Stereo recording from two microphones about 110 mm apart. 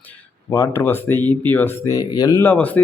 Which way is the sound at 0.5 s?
25° left (ahead or behind).